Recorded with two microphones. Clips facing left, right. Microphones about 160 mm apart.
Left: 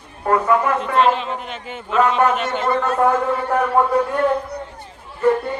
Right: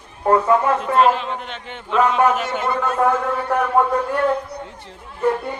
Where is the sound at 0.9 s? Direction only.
Centre (ahead or behind).